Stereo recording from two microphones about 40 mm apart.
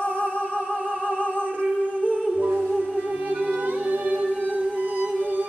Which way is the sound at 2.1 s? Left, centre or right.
Right.